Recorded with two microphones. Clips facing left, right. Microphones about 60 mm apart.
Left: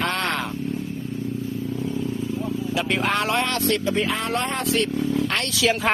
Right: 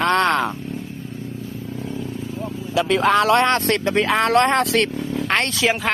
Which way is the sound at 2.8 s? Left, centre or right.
Right.